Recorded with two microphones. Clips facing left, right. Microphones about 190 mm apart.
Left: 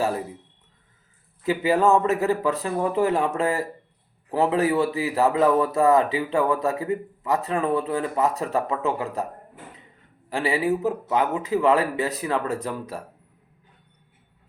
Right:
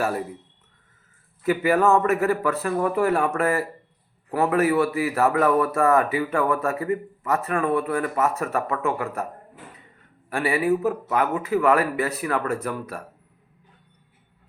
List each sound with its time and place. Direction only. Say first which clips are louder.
1.5 s a man's voice: even; 15° left (ahead or behind)
10.3 s a man's voice: right 1 dB; 20° left (ahead or behind)